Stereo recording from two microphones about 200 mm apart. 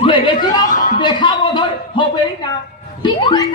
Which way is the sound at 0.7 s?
40° left (ahead or behind).